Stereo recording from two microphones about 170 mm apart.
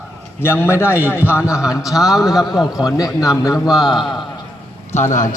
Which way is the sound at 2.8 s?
20° left (ahead or behind).